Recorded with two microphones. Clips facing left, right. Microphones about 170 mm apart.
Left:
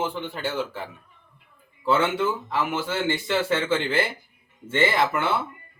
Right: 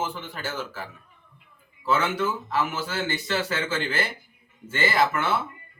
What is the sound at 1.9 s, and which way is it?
A man's voice, 25° left (ahead or behind).